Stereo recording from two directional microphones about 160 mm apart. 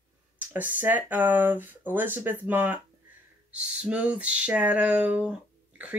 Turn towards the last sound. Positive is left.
turn(degrees=-5)  # may be behind; listen again after turning